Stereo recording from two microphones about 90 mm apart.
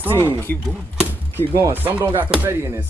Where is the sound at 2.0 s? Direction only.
15° right (ahead or behind).